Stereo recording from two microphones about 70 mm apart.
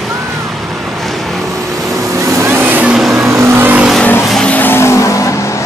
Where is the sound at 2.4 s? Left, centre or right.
Right.